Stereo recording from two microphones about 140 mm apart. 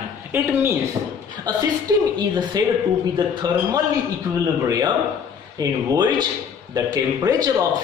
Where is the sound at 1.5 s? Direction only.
30° right (ahead or behind).